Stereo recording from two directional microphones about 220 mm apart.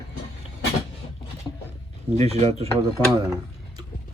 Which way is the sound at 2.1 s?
30° right (ahead or behind).